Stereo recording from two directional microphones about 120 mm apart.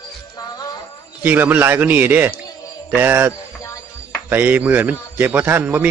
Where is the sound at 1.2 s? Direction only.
15° right (ahead or behind).